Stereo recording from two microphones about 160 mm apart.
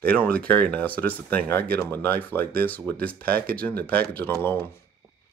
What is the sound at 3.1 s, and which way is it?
Speech, 70° right (ahead or behind).